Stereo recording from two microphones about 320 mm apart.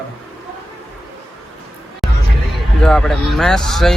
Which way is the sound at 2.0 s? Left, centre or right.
Centre.